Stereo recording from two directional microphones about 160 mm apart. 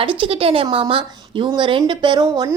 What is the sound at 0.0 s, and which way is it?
A woman's voice, 30° right (ahead or behind).